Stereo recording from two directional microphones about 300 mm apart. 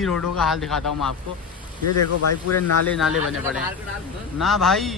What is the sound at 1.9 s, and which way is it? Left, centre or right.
Speech, left.